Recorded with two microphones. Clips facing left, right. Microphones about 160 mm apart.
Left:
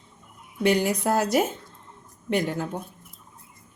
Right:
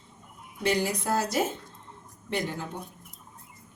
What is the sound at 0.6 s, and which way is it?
Speech, 55° left (ahead or behind).